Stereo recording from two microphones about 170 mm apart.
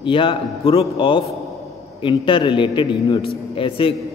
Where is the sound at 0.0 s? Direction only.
30° left (ahead or behind).